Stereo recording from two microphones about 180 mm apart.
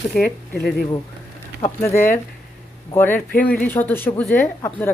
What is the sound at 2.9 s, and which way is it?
A woman's voice, 10° left (ahead or behind).